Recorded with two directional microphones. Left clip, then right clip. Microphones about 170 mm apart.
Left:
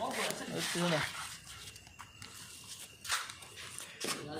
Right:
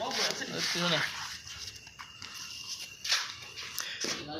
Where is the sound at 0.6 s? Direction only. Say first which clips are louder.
Right 4 dB; 15° left (ahead or behind).